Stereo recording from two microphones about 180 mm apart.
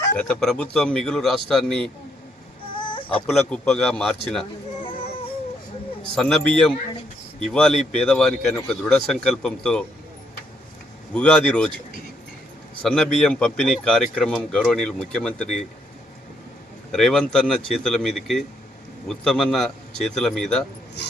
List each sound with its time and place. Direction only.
0.2 s speech: 5° left (ahead or behind)
3.1 s speech: 5° left (ahead or behind)
6.1 s speech: centre (ahead or behind)
11.1 s speech: 5° left (ahead or behind)
12.8 s speech: 5° left (ahead or behind)
16.9 s speech: 5° left (ahead or behind)